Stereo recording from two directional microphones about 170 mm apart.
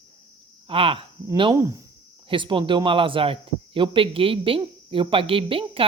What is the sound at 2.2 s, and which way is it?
Speech, 30° right (ahead or behind).